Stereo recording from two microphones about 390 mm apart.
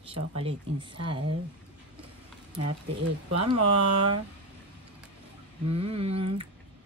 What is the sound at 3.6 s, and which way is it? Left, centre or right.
Speech, right.